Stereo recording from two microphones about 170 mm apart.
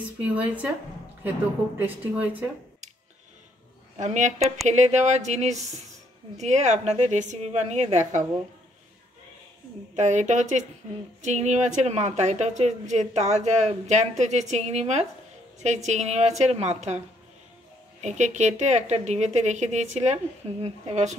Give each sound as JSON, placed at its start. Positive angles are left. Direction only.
{"t": 0.2, "sound": "a woman's voice", "side_deg": -10}
{"t": 1.8, "sound": "a woman's voice", "side_deg": -10}
{"t": 4.0, "sound": "a woman's voice", "side_deg": -45}
{"t": 9.9, "sound": "a woman's voice", "side_deg": -45}
{"t": 18.0, "sound": "a woman's voice", "side_deg": -45}